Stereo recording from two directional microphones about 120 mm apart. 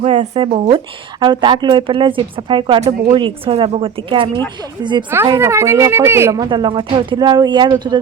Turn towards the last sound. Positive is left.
turn(degrees=-35)  # may be behind; listen again after turning